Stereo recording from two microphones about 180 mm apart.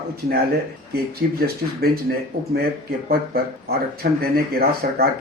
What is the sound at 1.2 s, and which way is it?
Speech, 65° right (ahead or behind).